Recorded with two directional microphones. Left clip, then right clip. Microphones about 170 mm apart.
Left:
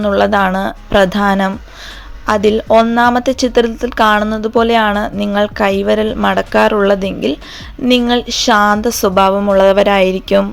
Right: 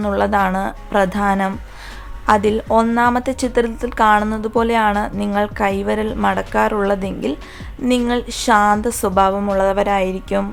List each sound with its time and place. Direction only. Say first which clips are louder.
0.0 s a woman's voice: left 5 dB; 20° left (ahead or behind)